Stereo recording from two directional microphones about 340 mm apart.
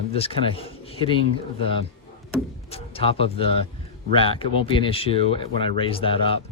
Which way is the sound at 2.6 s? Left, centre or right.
Centre.